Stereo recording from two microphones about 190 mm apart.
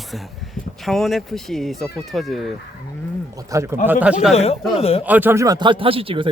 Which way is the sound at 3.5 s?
15° right (ahead or behind).